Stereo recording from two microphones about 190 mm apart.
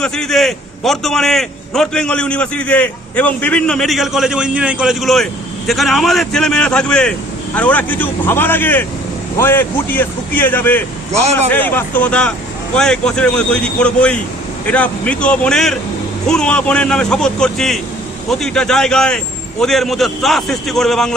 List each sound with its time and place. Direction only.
0.0 s a man's voice: 5° left (ahead or behind)
11.1 s speech: 35° right (ahead or behind)
11.5 s a man's voice: 10° left (ahead or behind)